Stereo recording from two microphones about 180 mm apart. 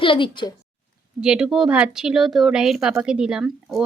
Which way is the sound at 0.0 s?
30° left (ahead or behind).